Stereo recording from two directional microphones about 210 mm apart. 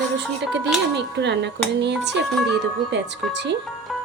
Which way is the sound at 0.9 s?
55° right (ahead or behind).